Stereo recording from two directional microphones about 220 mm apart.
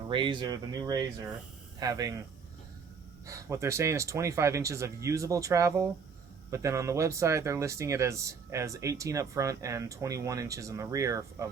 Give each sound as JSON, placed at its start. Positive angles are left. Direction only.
{"t": 0.1, "sound": "speech", "side_deg": -20}
{"t": 3.2, "sound": "speech", "side_deg": -15}